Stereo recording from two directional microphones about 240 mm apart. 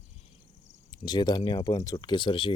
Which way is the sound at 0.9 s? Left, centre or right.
Centre.